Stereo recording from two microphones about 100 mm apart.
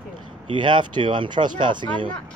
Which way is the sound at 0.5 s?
50° right (ahead or behind).